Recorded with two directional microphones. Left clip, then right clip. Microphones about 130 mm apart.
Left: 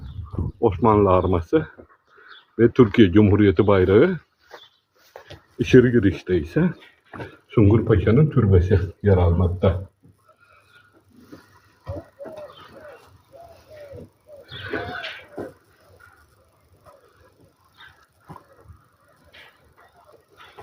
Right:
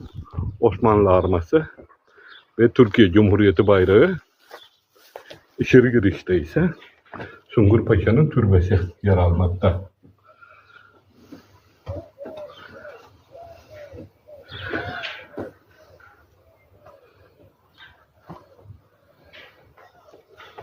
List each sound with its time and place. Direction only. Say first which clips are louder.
0.6 s speech: right 1 dB; 25° left (ahead or behind)
5.8 s speech: even; 10° left (ahead or behind)
7.5 s speech: right 1 dB; 30° left (ahead or behind)